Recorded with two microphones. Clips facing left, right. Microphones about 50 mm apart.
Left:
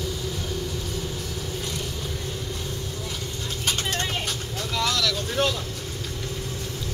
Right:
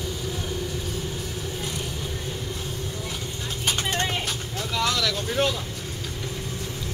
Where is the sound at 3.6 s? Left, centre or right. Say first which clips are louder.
Right 2 dB; centre.